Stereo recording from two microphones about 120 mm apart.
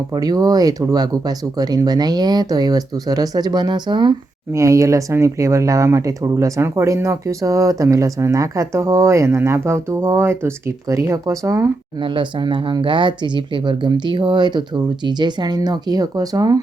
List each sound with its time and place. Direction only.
0.1 s speech: 35° right (ahead or behind)
4.5 s speech: 25° right (ahead or behind)
11.9 s speech: 45° right (ahead or behind)